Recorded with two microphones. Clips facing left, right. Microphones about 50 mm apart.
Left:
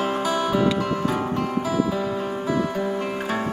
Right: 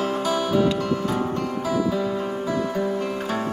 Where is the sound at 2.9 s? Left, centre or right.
Left.